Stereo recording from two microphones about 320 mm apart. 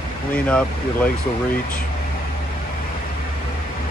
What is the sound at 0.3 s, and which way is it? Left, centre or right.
Speech, centre.